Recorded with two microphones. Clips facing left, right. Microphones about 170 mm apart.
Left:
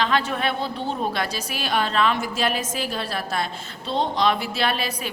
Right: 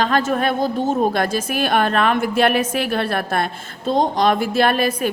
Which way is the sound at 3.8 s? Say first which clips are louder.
Right 5 dB; 45° right (ahead or behind).